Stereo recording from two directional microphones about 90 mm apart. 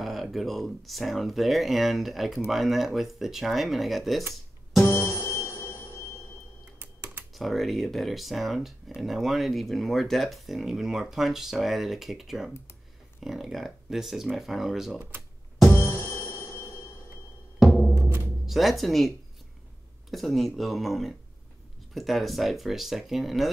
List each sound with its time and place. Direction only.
0.0 s speech: centre (ahead or behind)
4.8 s music: 30° left (ahead or behind)
6.8 s typing: 25° right (ahead or behind)
7.3 s speech: centre (ahead or behind)
15.0 s speech: 20° right (ahead or behind)
15.7 s music: 25° left (ahead or behind)
17.6 s music: 15° left (ahead or behind)
18.0 s music: 20° right (ahead or behind)
18.4 s speech: centre (ahead or behind)